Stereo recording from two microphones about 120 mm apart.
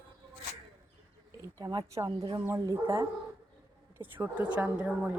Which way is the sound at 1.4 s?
30° right (ahead or behind).